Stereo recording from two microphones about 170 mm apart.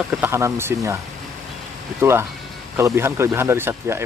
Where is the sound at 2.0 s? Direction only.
15° right (ahead or behind).